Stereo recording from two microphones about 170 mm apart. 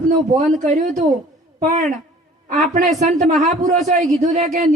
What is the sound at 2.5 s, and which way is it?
A woman's voice, 45° right (ahead or behind).